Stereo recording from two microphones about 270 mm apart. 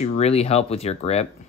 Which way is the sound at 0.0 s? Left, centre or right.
Left.